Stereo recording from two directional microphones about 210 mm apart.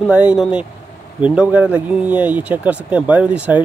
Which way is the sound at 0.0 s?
5° right (ahead or behind).